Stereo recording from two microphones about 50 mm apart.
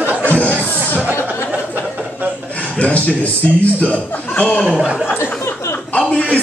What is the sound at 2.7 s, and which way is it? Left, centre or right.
A man's voice, left.